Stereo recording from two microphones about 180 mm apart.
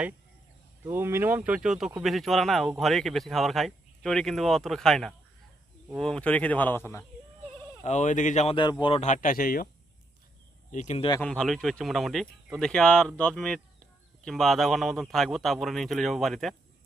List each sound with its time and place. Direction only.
0.9 s speech: 15° right (ahead or behind); by 7.0 s 10° left (ahead or behind)
7.9 s speech: 40° left (ahead or behind)
10.7 s speech: 40° left (ahead or behind)
11.2 s speech: 5° left (ahead or behind)